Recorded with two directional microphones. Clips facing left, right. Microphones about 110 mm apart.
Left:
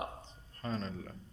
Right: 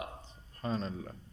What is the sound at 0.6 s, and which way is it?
Speech, 10° right (ahead or behind).